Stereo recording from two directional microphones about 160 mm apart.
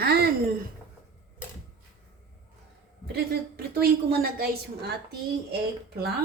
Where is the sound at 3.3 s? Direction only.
75° right (ahead or behind).